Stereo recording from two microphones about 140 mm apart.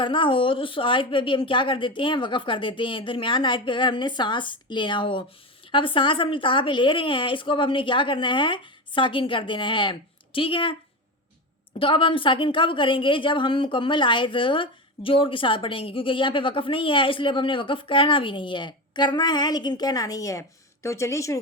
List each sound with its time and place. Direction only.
0.0 s a woman's voice: 35° left (ahead or behind)
11.8 s a woman's voice: 40° left (ahead or behind); by 21.3 s 20° left (ahead or behind)